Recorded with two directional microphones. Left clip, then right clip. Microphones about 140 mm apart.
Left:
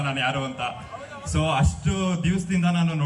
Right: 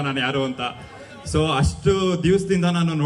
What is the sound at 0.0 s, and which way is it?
A man's voice, 30° right (ahead or behind).